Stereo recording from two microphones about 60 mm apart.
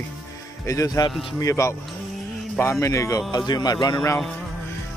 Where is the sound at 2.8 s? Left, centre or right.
Left.